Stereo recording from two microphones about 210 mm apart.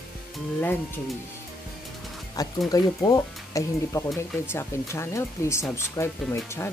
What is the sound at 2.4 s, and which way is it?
Speech, 20° left (ahead or behind).